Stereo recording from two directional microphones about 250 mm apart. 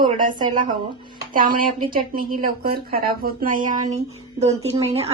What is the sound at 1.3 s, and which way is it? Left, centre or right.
Speech, right.